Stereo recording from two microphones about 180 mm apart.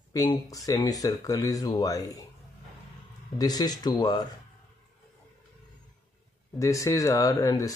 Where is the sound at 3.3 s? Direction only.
20° left (ahead or behind).